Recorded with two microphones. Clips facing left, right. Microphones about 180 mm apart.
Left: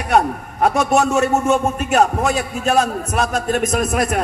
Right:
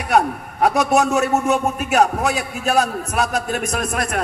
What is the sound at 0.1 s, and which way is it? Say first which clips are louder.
A man's voice: left 1 dB; centre (ahead or behind).